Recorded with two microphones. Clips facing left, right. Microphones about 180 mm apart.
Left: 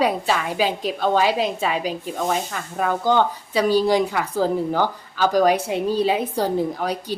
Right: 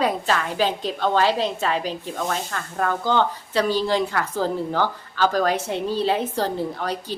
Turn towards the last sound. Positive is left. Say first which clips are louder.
# left 3 dB
turn(degrees=10)  # may be behind; listen again after turning